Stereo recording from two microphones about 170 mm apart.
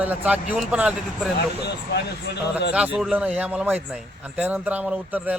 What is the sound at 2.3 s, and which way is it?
Speech, 80° left.